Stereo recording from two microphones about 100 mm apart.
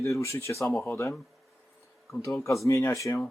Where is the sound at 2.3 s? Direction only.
30° left (ahead or behind).